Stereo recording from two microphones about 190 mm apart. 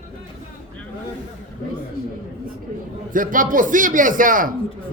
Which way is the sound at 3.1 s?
45° right (ahead or behind).